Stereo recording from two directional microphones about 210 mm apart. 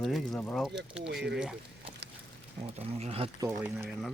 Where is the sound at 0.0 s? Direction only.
Centre (ahead or behind).